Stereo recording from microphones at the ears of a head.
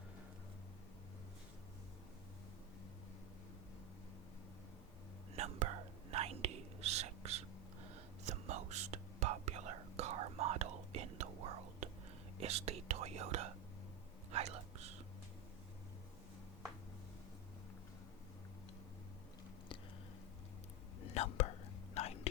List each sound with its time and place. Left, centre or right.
5.4 s whispering: right
21.0 s whispering: left